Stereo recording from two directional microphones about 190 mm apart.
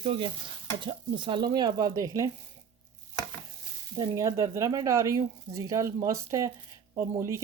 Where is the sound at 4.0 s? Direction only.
15° right (ahead or behind).